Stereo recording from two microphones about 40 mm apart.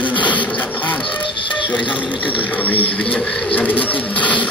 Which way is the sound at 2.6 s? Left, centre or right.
Left.